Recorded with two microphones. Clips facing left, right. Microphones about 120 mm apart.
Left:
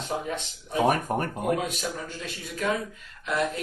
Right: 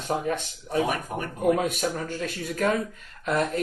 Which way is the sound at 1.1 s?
50° left (ahead or behind).